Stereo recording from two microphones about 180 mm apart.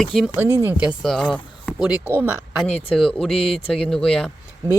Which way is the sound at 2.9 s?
5° left (ahead or behind).